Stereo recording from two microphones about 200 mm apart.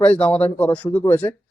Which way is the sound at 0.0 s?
5° left (ahead or behind).